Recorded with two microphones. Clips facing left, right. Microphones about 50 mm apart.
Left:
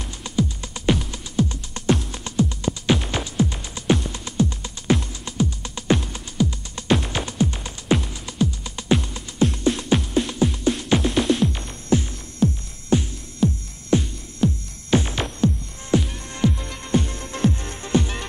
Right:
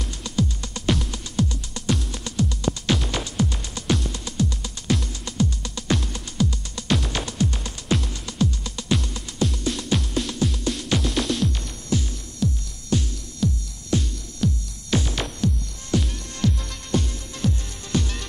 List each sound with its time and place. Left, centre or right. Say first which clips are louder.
0.2 s music: left 2 dB; centre
1.5 s music: left 4 dB; left
7.0 s music: left 2 dB; centre
9.4 s music: left 5 dB; left